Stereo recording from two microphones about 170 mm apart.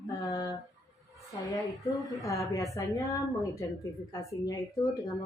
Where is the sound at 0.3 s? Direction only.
20° left (ahead or behind).